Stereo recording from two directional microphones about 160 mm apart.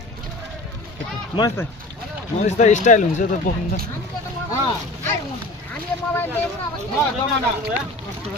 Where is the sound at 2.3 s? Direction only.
45° left (ahead or behind).